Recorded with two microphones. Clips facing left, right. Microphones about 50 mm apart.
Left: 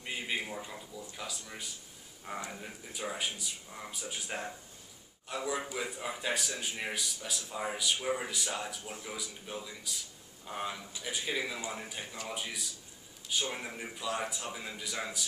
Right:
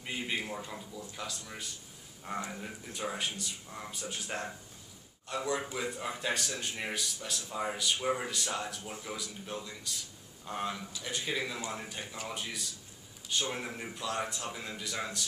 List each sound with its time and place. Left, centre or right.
0.0 s a man's voice: centre